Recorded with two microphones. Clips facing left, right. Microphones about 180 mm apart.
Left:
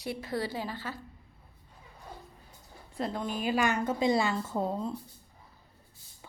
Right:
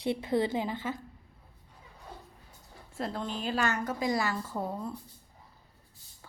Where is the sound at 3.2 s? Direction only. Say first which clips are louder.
Left 3 dB; 10° left (ahead or behind).